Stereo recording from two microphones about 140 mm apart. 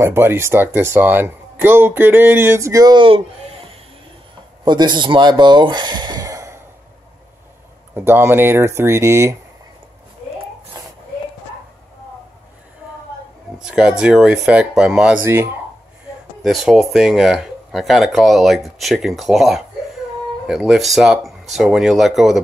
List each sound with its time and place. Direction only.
0.0 s speech: 15° right (ahead or behind)
7.9 s speech: 15° right (ahead or behind)
10.8 s a sound: 30° right (ahead or behind)
13.6 s speech: 5° right (ahead or behind)
15.2 s speech: 15° right (ahead or behind)
16.4 s speech: centre (ahead or behind)